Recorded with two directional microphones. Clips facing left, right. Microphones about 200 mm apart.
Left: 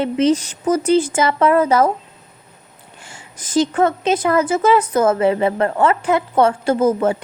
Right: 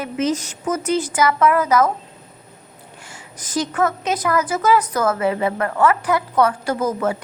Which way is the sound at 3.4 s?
25° left (ahead or behind).